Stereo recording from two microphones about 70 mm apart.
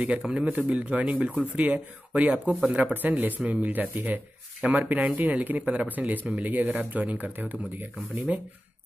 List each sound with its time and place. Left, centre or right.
0.2 s speech: centre
0.5 s speech: right